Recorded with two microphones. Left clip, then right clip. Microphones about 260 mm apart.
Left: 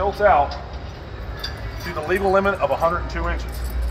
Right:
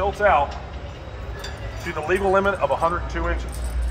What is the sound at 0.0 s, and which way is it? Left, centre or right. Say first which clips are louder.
Speech: left 2 dB; centre.